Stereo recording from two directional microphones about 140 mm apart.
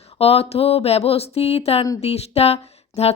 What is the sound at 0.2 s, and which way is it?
Speech, 45° left (ahead or behind).